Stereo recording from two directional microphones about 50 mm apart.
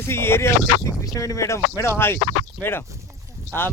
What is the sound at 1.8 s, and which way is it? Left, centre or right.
Speech, left.